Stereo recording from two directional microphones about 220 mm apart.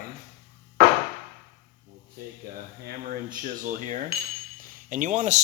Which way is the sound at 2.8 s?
40° right (ahead or behind).